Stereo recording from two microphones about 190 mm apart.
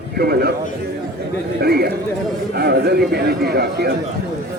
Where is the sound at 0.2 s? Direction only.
55° right (ahead or behind).